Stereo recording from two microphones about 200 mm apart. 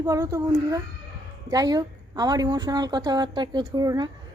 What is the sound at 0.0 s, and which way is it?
A woman's voice, 15° right (ahead or behind).